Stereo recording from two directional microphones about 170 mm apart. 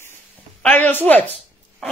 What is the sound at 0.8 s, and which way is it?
Speech, 10° left (ahead or behind).